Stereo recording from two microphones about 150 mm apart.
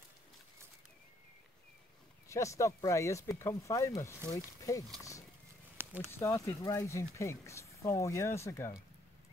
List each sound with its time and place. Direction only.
2.2 s speech: 20° left (ahead or behind)
5.8 s a sound: 15° right (ahead or behind)
6.1 s speech: 20° left (ahead or behind)